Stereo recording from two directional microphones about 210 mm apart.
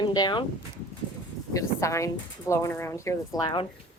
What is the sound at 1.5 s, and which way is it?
Speech, 15° left (ahead or behind).